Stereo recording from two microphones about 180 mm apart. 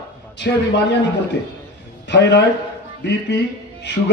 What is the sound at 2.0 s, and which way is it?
Speech, 75° left (ahead or behind).